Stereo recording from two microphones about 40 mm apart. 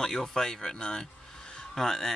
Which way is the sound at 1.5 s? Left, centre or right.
Centre.